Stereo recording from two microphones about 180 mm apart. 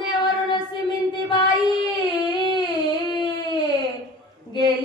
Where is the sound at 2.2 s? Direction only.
25° left (ahead or behind).